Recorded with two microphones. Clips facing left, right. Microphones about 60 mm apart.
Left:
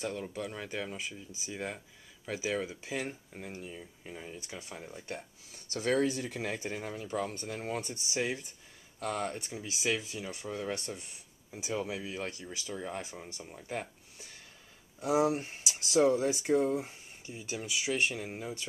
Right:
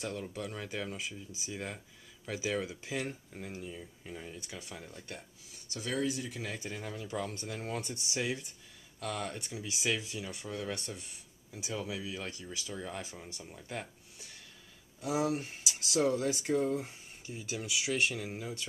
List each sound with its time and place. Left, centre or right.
0.0 s speech: centre
5.7 s speech: left
6.8 s speech: centre
9.0 s speech: centre
10.3 s speech: left
15.0 s speech: left; by 18.7 s centre